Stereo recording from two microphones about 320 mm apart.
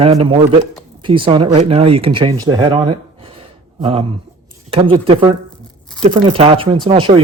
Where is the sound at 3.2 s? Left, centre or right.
Centre.